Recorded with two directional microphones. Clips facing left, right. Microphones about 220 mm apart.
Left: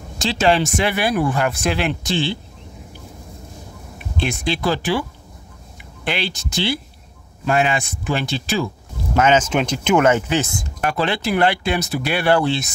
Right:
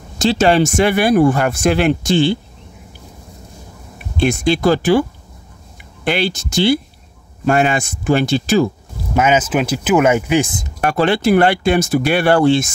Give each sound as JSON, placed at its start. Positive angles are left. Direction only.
{"t": 0.2, "sound": "speech", "side_deg": -45}
{"t": 4.2, "sound": "speech", "side_deg": -45}
{"t": 6.0, "sound": "speech", "side_deg": -45}
{"t": 9.1, "sound": "speech", "side_deg": -10}
{"t": 10.8, "sound": "speech", "side_deg": -50}